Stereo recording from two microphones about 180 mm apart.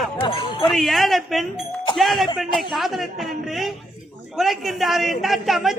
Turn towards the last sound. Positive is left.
turn(degrees=0)  # may be behind; listen again after turning